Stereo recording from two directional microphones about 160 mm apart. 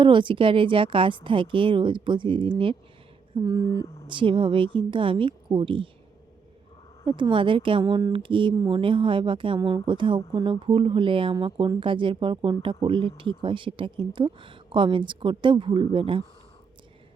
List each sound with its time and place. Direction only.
0.0 s a woman's voice: 30° right (ahead or behind)
3.3 s a sound: 25° right (ahead or behind)
3.7 s speech: 25° left (ahead or behind)
4.1 s a woman's voice: 30° right (ahead or behind)
7.0 s a woman's voice: 30° right (ahead or behind)